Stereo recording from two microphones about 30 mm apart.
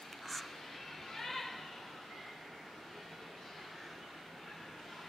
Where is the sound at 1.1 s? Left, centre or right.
Centre.